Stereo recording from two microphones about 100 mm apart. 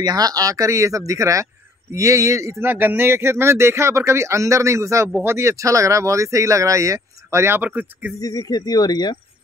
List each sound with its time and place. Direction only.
0.0 s speech: 40° right (ahead or behind)
2.6 s a man's voice: 20° right (ahead or behind)
8.2 s speech: 40° left (ahead or behind)